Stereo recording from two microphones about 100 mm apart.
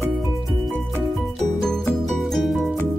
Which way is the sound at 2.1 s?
Centre (ahead or behind).